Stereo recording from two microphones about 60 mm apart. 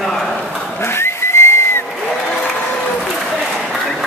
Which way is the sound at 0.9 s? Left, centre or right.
Left.